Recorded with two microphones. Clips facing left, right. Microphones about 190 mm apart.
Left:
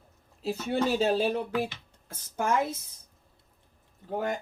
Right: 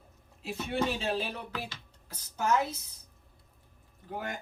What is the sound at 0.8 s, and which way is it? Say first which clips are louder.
Speech: left 7 dB; 40° left (ahead or behind).